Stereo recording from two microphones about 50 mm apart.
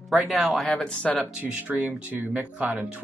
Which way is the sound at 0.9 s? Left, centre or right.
Left.